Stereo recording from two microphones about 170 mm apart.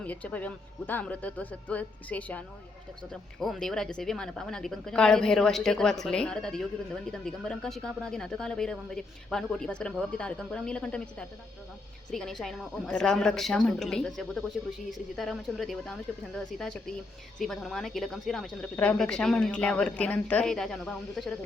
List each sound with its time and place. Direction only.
0.0 s speech: 10° left (ahead or behind)